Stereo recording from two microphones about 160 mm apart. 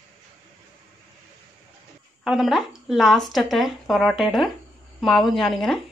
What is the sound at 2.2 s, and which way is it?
Speech, centre (ahead or behind).